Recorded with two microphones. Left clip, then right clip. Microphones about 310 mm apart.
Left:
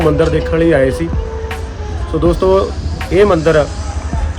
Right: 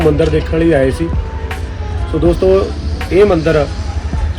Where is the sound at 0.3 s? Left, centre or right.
Left.